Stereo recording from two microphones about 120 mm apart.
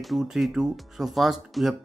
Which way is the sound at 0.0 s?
Centre (ahead or behind).